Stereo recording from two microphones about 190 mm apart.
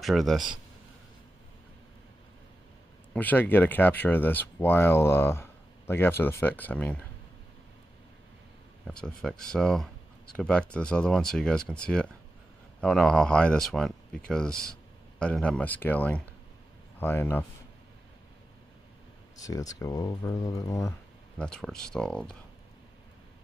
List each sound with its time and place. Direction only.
0.0 s speech: centre (ahead or behind)
3.1 s speech: 10° left (ahead or behind)
8.8 s speech: 5° left (ahead or behind)
19.4 s speech: 20° left (ahead or behind)
21.4 s speech: 5° left (ahead or behind)